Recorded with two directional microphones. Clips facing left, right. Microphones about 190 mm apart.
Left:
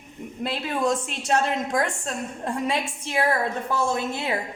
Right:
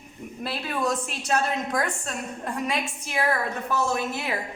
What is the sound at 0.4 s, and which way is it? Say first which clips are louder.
A woman's voice: left 3 dB; 25° left (ahead or behind).